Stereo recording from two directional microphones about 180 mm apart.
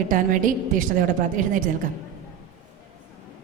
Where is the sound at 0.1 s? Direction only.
45° right (ahead or behind).